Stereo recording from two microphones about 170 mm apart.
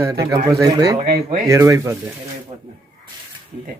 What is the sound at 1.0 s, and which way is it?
Speech, 65° right (ahead or behind).